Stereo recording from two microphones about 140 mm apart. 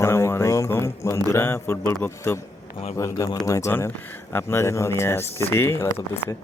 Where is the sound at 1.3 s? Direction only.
15° left (ahead or behind).